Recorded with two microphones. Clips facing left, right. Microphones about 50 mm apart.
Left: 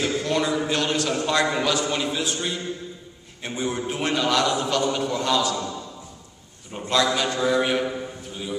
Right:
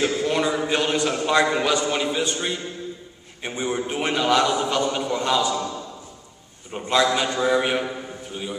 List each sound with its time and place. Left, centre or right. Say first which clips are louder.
0.0 s a sound: right 2 dB; centre
0.8 s a man's voice: right 2 dB; centre
3.4 s a man's voice: right 1 dB; centre
6.7 s a man's voice: right 2 dB; centre